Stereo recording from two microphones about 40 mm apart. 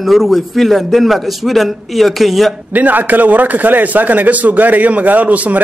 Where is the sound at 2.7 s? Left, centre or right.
Right.